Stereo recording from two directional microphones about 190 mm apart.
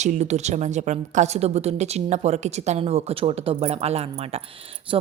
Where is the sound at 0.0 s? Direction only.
35° right (ahead or behind).